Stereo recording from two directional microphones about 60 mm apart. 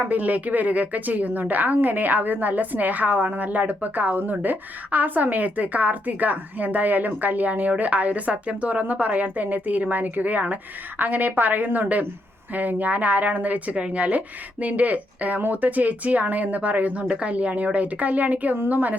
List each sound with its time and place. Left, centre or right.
0.0 s a woman's voice: right